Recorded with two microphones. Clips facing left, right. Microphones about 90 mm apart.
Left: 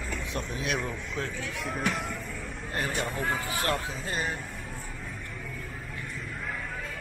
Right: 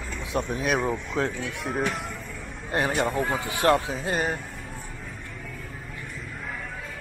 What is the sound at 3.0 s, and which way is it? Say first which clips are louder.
Speech: right 5 dB; centre (ahead or behind).